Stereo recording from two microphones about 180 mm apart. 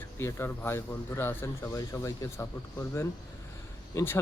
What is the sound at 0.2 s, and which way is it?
Speech, 15° left (ahead or behind).